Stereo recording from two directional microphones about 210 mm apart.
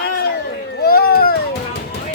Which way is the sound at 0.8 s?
45° left (ahead or behind).